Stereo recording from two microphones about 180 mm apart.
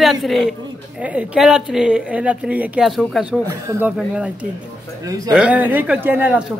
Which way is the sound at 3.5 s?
15° right (ahead or behind).